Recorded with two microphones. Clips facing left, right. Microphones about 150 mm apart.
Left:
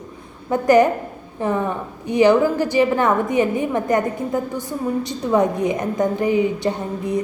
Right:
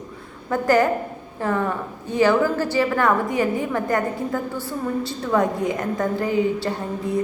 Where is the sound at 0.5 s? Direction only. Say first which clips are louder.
Left 4 dB; 20° left (ahead or behind).